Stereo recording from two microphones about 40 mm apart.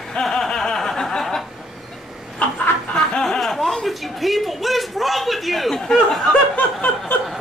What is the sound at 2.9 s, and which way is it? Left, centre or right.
Snicker, centre.